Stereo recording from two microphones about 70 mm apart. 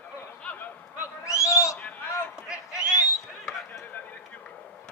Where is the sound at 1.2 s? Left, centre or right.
Left.